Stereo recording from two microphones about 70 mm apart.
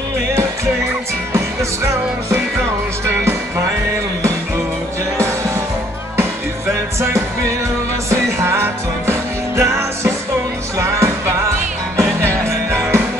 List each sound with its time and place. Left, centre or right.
1.3 s music: right
8.1 s music: right